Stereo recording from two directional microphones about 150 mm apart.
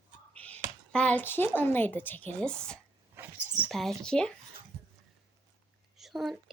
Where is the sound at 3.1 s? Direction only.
15° right (ahead or behind).